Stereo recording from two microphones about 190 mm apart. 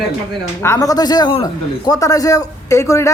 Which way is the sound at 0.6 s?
15° left (ahead or behind).